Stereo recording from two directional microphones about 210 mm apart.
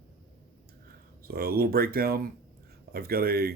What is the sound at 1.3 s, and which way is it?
Speech, 45° right (ahead or behind).